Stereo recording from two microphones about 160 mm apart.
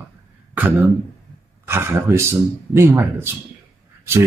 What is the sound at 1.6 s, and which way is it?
Speech, 15° right (ahead or behind).